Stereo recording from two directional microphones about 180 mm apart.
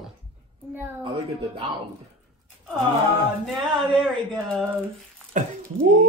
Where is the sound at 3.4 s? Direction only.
Centre (ahead or behind).